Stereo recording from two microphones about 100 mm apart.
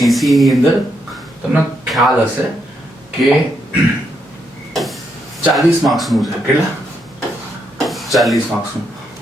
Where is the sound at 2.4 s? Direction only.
25° right (ahead or behind).